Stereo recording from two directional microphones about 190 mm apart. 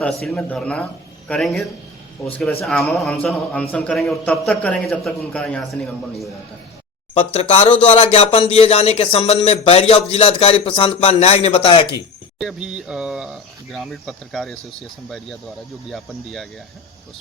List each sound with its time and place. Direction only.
0.3 s a man's voice: 5° left (ahead or behind)
7.1 s speech: 35° left (ahead or behind)
12.4 s a man's voice: 5° right (ahead or behind)
15.9 s a man's voice: centre (ahead or behind)